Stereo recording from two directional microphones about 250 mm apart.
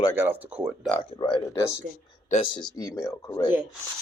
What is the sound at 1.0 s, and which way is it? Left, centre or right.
Speech, centre.